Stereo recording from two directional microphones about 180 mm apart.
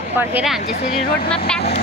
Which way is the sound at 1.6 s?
60° left (ahead or behind).